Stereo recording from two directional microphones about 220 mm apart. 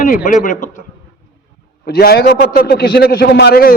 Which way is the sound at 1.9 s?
45° left (ahead or behind).